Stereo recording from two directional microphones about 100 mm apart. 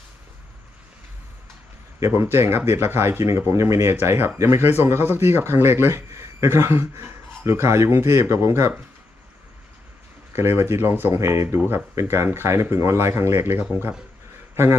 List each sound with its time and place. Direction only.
2.0 s speech: 25° right (ahead or behind)
10.3 s a man's voice: 25° right (ahead or behind)